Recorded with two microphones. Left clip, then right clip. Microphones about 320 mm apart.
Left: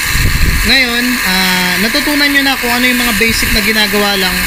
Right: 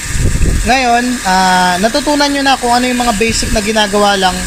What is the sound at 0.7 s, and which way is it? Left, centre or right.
Speech, centre.